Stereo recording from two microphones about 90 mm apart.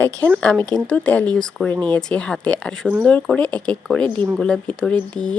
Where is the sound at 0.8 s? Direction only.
15° left (ahead or behind).